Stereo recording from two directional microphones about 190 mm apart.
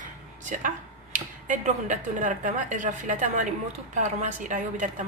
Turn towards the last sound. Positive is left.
turn(degrees=-40)  # may be behind; listen again after turning